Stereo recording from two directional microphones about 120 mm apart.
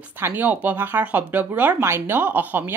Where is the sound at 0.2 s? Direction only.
15° right (ahead or behind).